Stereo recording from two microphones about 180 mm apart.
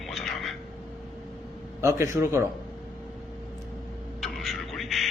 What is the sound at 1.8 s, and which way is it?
Speech, 15° right (ahead or behind).